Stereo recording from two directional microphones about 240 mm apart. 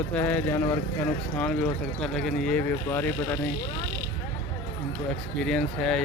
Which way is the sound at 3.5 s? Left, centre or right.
Left.